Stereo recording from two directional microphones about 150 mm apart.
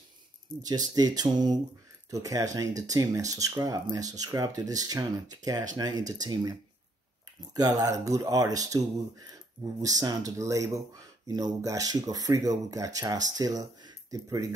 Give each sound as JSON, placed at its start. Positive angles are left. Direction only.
{"t": 0.7, "sound": "speech", "side_deg": -25}
{"t": 7.5, "sound": "speech", "side_deg": -25}